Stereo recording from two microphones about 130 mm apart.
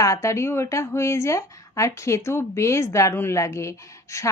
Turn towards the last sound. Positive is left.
turn(degrees=20)  # may be behind; listen again after turning